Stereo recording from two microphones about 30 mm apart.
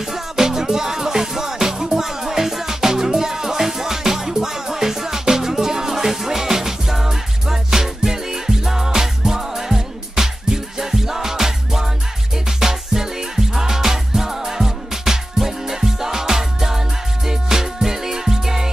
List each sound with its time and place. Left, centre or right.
0.0 s music: centre